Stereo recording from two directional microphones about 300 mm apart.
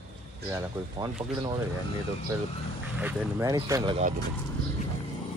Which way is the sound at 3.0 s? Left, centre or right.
Centre.